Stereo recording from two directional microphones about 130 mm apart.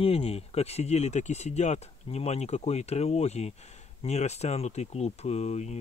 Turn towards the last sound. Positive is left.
turn(degrees=60)  # may be behind; listen again after turning